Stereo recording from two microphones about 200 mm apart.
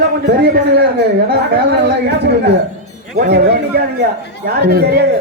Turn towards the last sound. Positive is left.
turn(degrees=-50)  # may be behind; listen again after turning